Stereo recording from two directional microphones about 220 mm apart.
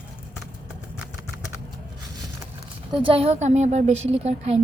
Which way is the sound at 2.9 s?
25° right (ahead or behind).